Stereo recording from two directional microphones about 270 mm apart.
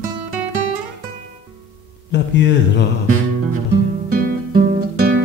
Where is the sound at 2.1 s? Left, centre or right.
Left.